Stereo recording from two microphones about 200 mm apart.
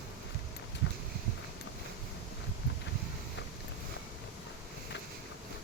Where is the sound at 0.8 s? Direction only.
65° left (ahead or behind).